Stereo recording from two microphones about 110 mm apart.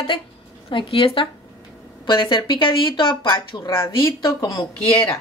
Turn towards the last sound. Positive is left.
turn(degrees=30)  # may be behind; listen again after turning